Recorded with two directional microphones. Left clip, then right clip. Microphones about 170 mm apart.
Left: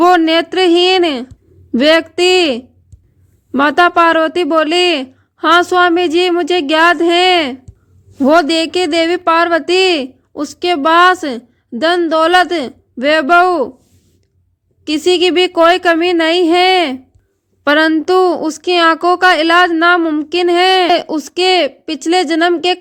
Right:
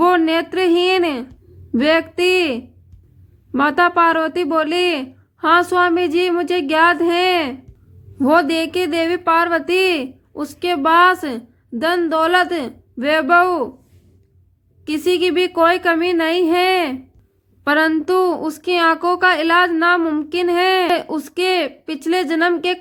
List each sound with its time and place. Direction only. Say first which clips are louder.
0.0 s a woman's voice: left 5 dB; 40° left (ahead or behind)
14.8 s a woman's voice: left 5 dB; 40° left (ahead or behind)